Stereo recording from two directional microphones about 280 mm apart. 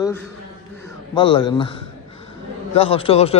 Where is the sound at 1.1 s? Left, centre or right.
Centre.